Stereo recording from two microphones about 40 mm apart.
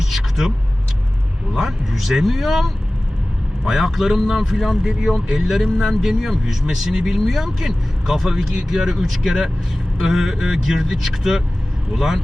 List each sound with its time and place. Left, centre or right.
0.0 s vehicle: centre
1.5 s speech: centre